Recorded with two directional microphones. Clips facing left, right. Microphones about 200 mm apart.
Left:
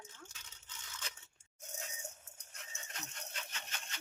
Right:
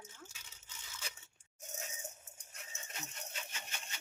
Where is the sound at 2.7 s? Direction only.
5° right (ahead or behind).